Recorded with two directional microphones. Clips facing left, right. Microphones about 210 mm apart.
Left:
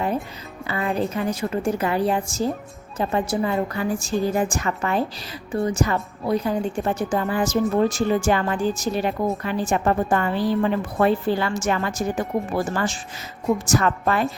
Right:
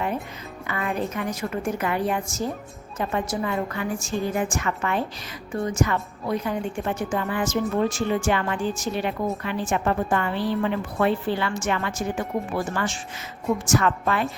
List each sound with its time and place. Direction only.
0.7 s a woman's voice: 30° left (ahead or behind)